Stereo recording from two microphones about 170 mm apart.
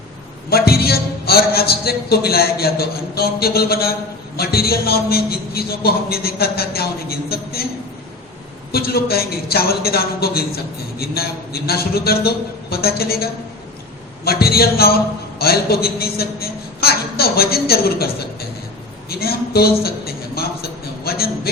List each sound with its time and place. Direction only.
0.5 s a man's voice: 65° left (ahead or behind)
8.7 s a man's voice: 65° left (ahead or behind)
14.3 s a man's voice: 65° left (ahead or behind)
19.0 s a sound: 65° left (ahead or behind)